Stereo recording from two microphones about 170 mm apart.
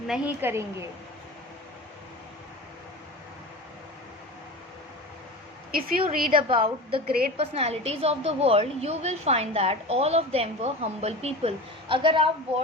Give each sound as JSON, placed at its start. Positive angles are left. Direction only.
{"t": 0.1, "sound": "a woman's voice", "side_deg": -10}
{"t": 5.7, "sound": "a woman's voice", "side_deg": -60}
{"t": 6.3, "sound": "a woman's voice", "side_deg": -30}